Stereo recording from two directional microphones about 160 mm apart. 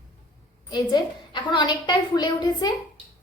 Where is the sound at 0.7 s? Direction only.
30° left (ahead or behind).